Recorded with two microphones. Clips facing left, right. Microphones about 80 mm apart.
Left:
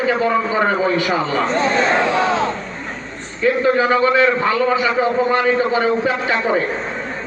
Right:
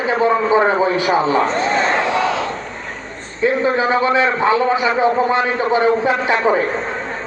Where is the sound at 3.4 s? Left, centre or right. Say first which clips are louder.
Left 1 dB; right.